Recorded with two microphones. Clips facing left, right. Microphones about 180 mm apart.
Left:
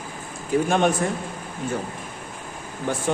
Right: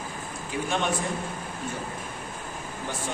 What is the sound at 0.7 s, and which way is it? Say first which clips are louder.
Speech: left 6 dB; 50° left (ahead or behind).